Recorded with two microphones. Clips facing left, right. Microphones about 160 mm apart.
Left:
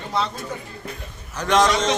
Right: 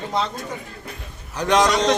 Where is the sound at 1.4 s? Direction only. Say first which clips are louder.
Right 1 dB; 15° right (ahead or behind).